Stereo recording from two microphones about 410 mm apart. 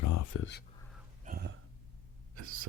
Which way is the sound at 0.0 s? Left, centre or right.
Left.